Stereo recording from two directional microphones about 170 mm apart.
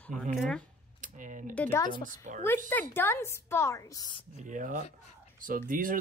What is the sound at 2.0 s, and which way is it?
Speech, 50° right (ahead or behind).